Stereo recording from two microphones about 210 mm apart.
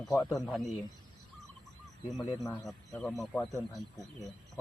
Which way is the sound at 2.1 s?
Centre (ahead or behind).